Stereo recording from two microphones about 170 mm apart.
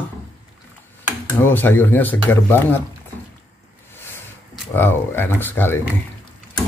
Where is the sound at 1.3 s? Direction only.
10° left (ahead or behind).